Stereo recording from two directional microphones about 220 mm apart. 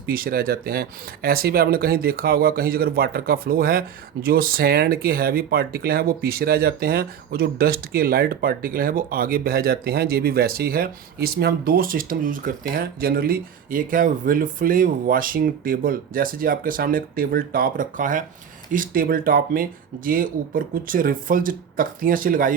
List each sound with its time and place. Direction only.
0.0 s speech: 40° right (ahead or behind)